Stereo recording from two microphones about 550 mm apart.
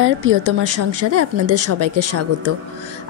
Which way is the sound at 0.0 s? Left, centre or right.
Right.